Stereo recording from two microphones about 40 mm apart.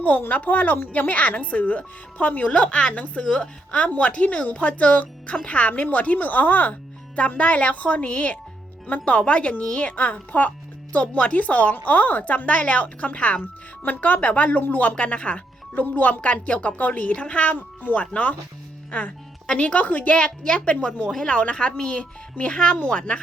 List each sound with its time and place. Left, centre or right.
0.3 s speech: left
7.2 s speech: left
13.4 s speech: left
14.9 s speech: left
15.7 s a woman's voice: left
20.1 s speech: left
20.7 s speech: left